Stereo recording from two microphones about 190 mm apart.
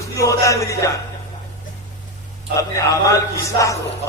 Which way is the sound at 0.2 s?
15° left (ahead or behind).